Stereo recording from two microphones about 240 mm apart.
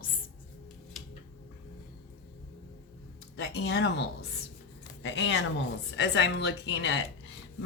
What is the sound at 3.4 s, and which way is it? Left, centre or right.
Speech, left.